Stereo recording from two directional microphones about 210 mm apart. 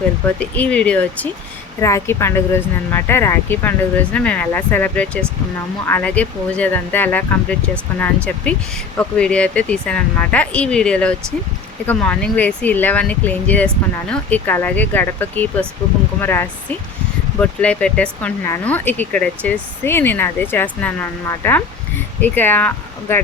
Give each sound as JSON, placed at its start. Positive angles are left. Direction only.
{"t": 0.3, "sound": "speech", "side_deg": 5}